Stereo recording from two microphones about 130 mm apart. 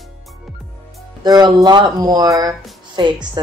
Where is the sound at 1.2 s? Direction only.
30° right (ahead or behind).